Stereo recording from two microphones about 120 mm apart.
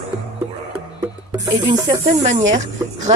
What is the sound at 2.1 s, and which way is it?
Speech, 75° right (ahead or behind).